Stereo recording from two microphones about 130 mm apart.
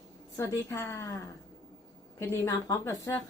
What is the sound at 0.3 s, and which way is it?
Speech, 25° left (ahead or behind).